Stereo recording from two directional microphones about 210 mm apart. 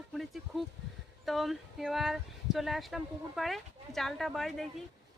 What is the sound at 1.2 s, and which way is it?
Speech, centre (ahead or behind).